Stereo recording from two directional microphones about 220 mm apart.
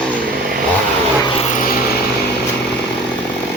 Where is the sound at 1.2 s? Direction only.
25° left (ahead or behind).